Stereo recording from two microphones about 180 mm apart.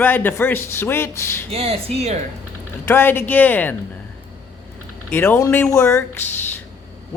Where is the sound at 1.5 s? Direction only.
35° right (ahead or behind).